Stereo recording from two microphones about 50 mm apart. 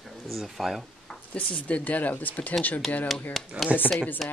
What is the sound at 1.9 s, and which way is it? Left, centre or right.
Speech, left.